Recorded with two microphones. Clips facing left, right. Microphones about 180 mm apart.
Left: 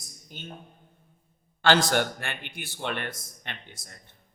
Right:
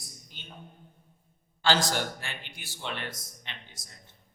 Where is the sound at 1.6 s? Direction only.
60° left (ahead or behind).